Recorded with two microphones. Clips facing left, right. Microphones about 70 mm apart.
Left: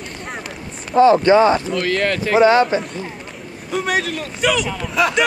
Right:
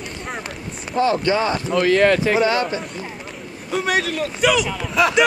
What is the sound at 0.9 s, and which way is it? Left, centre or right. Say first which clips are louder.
Speech: left 7 dB; left.